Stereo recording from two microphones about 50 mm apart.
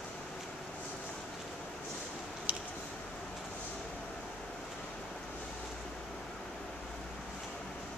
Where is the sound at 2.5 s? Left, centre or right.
Right.